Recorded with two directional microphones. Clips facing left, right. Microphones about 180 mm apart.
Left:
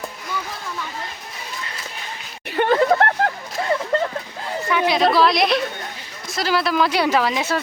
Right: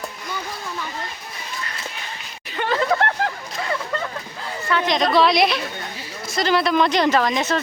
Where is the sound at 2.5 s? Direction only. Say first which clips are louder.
Left 6 dB; 55° left (ahead or behind).